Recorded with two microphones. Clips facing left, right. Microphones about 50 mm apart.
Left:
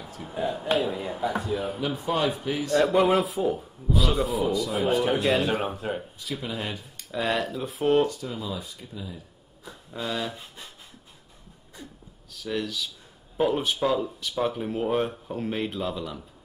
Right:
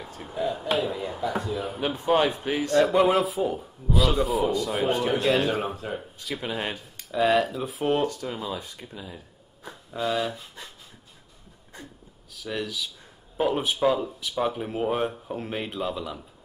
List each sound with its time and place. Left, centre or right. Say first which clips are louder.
0.3 s speech: right 1 dB; left
0.9 s speech: even; centre
1.8 s speech: right 7 dB; right
2.8 s speech: right 1 dB; centre
5.8 s speech: left 2 dB; centre
6.3 s speech: right 2 dB; right
7.1 s speech: right 5 dB; centre
8.1 s speech: right 1 dB; right
9.8 s speech: right 4 dB; centre
12.3 s speech: left 1 dB; centre